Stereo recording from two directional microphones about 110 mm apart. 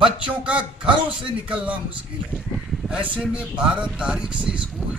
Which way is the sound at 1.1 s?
10° right (ahead or behind).